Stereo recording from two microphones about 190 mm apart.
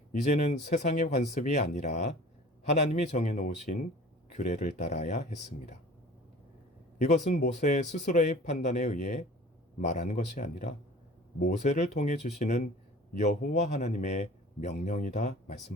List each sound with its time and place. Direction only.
0.1 s speech: 40° left (ahead or behind)
7.0 s a man's voice: 40° left (ahead or behind)